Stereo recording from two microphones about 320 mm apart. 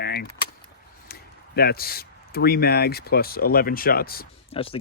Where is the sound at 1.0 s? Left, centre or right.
Left.